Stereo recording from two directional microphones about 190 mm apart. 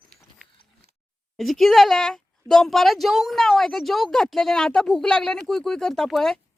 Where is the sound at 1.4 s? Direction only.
Centre (ahead or behind).